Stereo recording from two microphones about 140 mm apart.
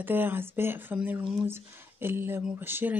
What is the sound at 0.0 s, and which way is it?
Speech, 15° right (ahead or behind).